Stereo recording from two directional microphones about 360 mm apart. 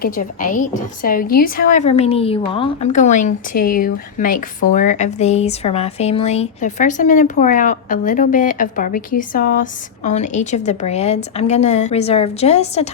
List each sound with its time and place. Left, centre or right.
0.0 s a woman's voice: left